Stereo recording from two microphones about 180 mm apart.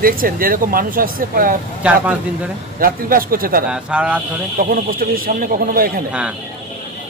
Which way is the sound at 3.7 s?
5° right (ahead or behind).